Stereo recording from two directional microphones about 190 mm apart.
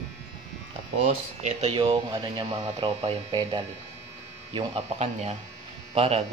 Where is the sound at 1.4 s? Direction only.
30° right (ahead or behind).